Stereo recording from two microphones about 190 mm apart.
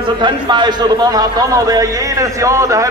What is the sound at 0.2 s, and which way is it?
A man's voice, 25° right (ahead or behind).